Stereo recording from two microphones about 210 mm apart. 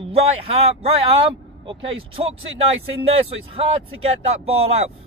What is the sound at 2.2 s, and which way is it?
Speech, 30° right (ahead or behind).